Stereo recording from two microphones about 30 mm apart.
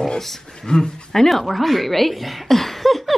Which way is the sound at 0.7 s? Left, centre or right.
Left.